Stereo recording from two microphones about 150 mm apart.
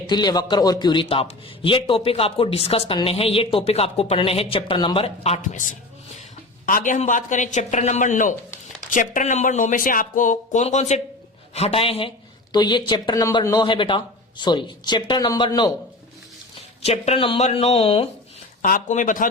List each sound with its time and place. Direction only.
0.1 s a man's voice: 30° left (ahead or behind)
1.0 s speech: 40° left (ahead or behind)
6.7 s speech: 60° left (ahead or behind); by 15.7 s 30° left (ahead or behind)
16.8 s speech: 45° left (ahead or behind)
18.6 s speech: 60° left (ahead or behind)